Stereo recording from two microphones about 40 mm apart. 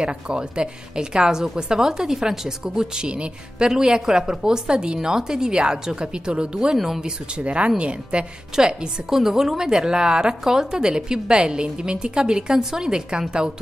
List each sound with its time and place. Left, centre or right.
0.0 s a woman's voice: right
6.8 s speech: centre
7.3 s a woman's voice: right
8.5 s a woman's voice: centre